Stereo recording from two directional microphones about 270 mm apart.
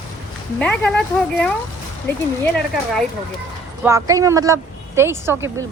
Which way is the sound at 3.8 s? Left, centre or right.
Centre.